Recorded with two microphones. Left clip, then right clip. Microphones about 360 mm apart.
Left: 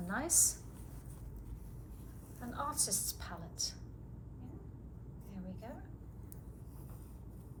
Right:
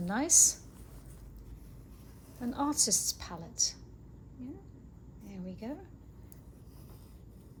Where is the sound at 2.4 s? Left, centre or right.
Centre.